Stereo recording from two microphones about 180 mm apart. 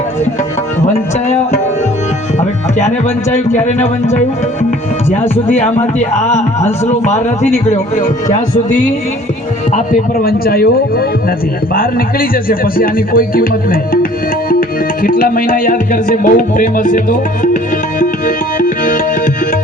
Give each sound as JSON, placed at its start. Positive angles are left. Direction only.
{"t": 2.7, "sound": "a man's voice", "side_deg": 40}
{"t": 6.0, "sound": "a man's voice", "side_deg": 40}
{"t": 11.7, "sound": "music", "side_deg": 55}